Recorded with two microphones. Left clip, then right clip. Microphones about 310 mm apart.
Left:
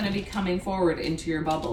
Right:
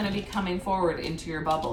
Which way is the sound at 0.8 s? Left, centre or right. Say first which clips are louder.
Left 2 dB; right.